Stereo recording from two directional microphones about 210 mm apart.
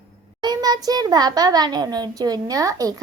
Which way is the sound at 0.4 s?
20° right (ahead or behind).